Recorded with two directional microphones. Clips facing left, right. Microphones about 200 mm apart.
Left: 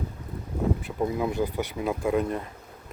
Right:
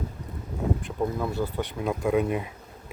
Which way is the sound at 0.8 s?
5° left (ahead or behind).